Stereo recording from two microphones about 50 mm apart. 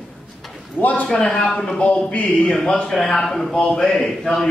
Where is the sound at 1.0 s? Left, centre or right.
Centre.